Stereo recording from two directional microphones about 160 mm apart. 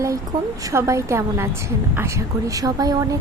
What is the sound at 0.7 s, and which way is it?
Speech, 20° right (ahead or behind).